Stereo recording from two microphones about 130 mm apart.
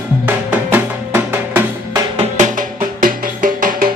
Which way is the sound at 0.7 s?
15° right (ahead or behind).